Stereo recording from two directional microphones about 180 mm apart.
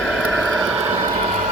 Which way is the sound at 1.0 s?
35° right (ahead or behind).